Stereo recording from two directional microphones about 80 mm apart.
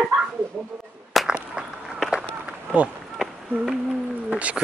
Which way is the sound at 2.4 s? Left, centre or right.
Centre.